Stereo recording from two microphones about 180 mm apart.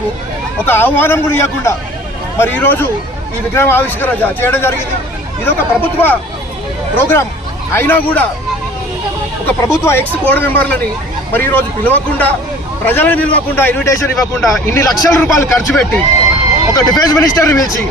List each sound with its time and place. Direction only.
0.6 s a man's voice: 10° left (ahead or behind)
9.5 s a man's voice: 15° left (ahead or behind)